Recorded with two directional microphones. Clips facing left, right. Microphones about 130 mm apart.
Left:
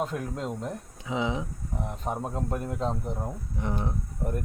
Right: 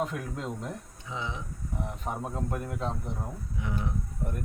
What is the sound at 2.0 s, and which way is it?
Speech, 20° left (ahead or behind).